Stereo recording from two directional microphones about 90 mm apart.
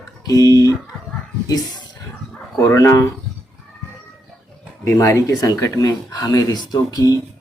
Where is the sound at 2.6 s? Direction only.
35° left (ahead or behind).